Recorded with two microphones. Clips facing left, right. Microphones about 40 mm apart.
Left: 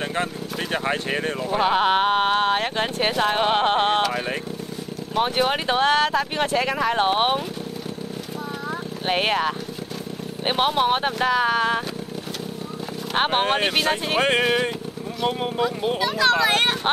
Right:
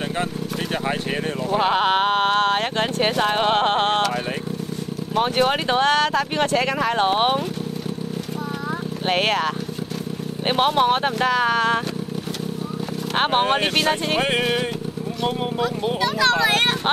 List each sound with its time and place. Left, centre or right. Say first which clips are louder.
0.8 s vehicle: left 1 dB; centre
1.5 s speech: right 1 dB; centre
9.0 s speech: right 1 dB; centre
13.1 s speech: right 1 dB; centre